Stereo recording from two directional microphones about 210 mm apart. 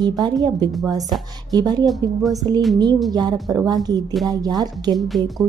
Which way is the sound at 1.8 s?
Centre (ahead or behind).